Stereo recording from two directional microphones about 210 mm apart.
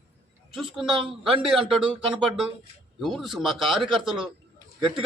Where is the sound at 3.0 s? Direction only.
Centre (ahead or behind).